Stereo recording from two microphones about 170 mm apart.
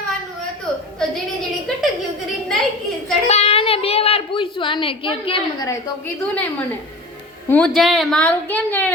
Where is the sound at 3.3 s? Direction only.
40° left (ahead or behind).